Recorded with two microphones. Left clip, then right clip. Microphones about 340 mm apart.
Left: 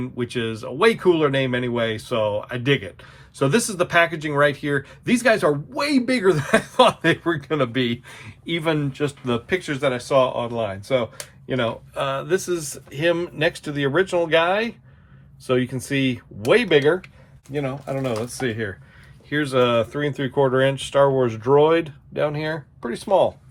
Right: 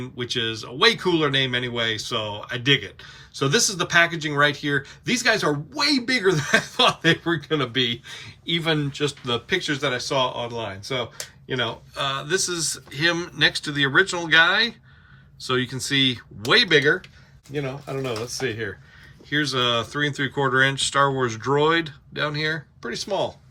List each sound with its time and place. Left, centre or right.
0.0 s speech: centre
17.5 s speech: centre